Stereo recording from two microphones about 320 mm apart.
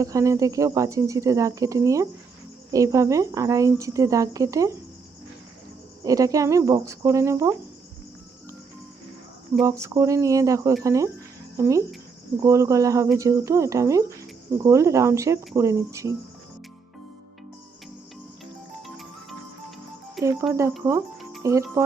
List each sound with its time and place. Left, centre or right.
0.0 s speech: centre
6.1 s speech: centre
9.6 s speech: centre
20.1 s speech: centre